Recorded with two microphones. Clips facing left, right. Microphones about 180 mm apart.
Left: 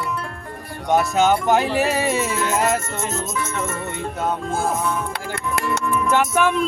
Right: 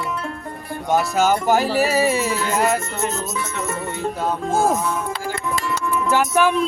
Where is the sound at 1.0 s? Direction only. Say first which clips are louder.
Left 1 dB; centre (ahead or behind).